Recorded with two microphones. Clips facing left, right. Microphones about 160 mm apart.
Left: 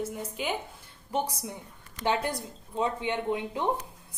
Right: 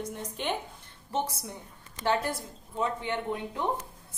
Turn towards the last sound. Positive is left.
turn(degrees=20)  # may be behind; listen again after turning